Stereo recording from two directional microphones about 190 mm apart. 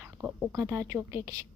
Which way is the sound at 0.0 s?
10° right (ahead or behind).